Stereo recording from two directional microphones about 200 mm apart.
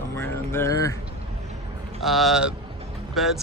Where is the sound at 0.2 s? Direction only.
10° left (ahead or behind).